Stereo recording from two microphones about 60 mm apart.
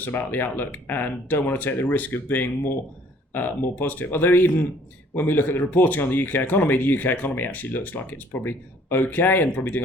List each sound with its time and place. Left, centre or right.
0.0 s speech: left